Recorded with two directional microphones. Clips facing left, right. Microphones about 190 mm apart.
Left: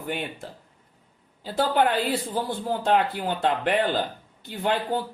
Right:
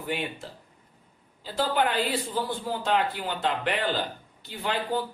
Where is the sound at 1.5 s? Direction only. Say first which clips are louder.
Left 4 dB; 55° left (ahead or behind).